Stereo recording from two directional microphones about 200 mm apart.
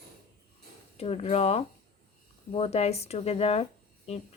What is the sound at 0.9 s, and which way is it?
Speech, 30° left (ahead or behind).